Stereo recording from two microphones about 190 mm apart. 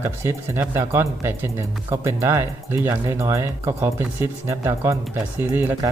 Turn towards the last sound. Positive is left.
turn(degrees=-10)  # may be behind; listen again after turning